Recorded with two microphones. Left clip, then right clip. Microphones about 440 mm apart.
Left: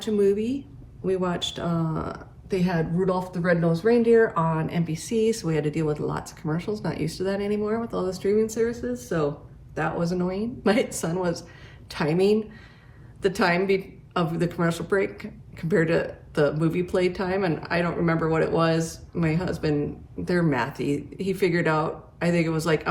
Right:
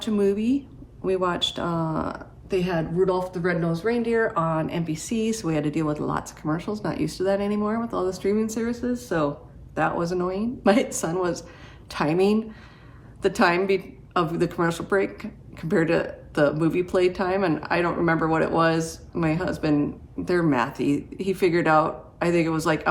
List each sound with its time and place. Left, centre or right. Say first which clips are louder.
0.0 s speech: left 1 dB; centre